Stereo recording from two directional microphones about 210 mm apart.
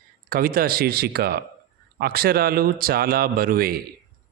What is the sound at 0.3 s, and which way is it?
A man's voice, 45° right (ahead or behind).